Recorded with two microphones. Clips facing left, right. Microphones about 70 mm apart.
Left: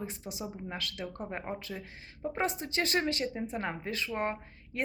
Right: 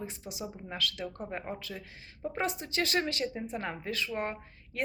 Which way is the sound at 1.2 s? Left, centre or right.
Centre.